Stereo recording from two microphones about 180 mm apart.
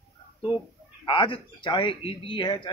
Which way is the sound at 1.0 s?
25° left (ahead or behind).